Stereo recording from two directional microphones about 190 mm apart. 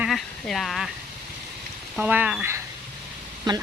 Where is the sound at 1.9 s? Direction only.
10° right (ahead or behind).